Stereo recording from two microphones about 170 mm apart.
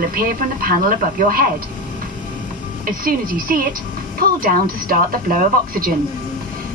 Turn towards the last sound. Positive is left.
turn(degrees=-60)  # may be behind; listen again after turning